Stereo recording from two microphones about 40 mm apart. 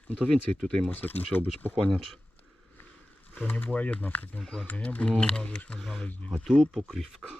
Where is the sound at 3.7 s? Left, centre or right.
Left.